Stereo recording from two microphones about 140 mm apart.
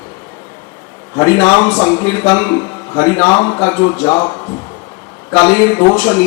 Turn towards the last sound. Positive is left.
turn(degrees=10)  # may be behind; listen again after turning